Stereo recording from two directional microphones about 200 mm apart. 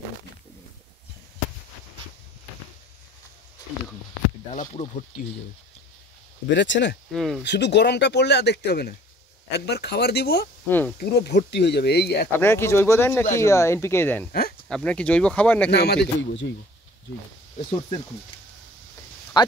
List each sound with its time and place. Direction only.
4.5 s speech: 40° left (ahead or behind)
6.5 s speech: 65° left (ahead or behind)
7.1 s speech: centre (ahead or behind)
7.4 s speech: 60° left (ahead or behind)
10.7 s speech: 10° left (ahead or behind)
11.0 s speech: 55° left (ahead or behind)
12.3 s speech: 10° left (ahead or behind)
15.7 s speech: 55° left (ahead or behind)
19.4 s speech: 20° left (ahead or behind)